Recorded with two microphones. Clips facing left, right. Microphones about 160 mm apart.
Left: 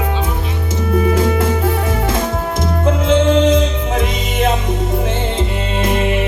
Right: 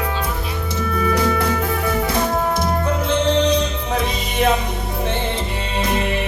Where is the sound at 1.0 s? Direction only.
25° left (ahead or behind).